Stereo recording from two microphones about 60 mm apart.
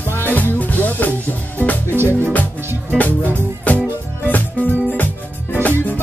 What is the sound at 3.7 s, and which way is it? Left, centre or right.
Music, left.